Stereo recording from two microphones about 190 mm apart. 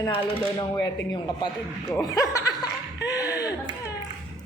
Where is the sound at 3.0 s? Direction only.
20° left (ahead or behind).